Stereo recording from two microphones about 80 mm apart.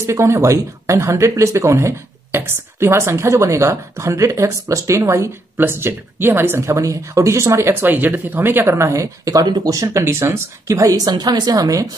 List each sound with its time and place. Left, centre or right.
0.0 s speech: right
10.7 s speech: right